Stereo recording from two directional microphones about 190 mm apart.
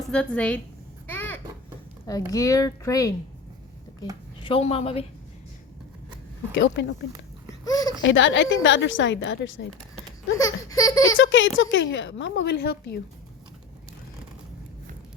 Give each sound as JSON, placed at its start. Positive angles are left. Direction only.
{"t": 0.1, "sound": "a woman's voice", "side_deg": 5}
{"t": 1.0, "sound": "a sound", "side_deg": 10}
{"t": 2.0, "sound": "speech", "side_deg": 20}
{"t": 4.4, "sound": "a woman's voice", "side_deg": 30}
{"t": 6.5, "sound": "speech", "side_deg": 65}
{"t": 7.6, "sound": "a sound", "side_deg": 20}
{"t": 8.0, "sound": "a woman's voice", "side_deg": 75}
{"t": 10.3, "sound": "speech", "side_deg": 20}
{"t": 11.1, "sound": "a woman's voice", "side_deg": 80}